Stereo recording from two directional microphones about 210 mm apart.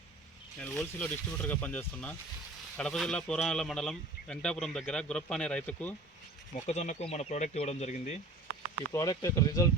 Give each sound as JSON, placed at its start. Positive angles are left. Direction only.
{"t": 0.6, "sound": "speech", "side_deg": 5}
{"t": 6.7, "sound": "speech", "side_deg": 35}
{"t": 8.9, "sound": "speech", "side_deg": 15}